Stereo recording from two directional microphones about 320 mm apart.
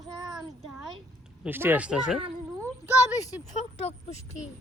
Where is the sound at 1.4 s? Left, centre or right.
Centre.